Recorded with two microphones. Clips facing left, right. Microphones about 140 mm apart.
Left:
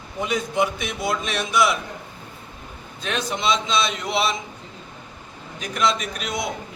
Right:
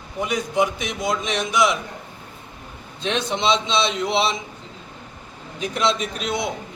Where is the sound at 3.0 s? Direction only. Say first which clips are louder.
Right 2 dB; 25° right (ahead or behind).